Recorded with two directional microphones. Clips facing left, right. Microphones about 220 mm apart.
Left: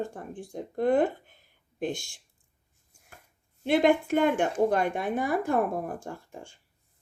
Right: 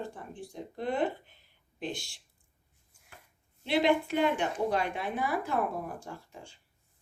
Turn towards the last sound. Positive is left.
turn(degrees=50)  # may be behind; listen again after turning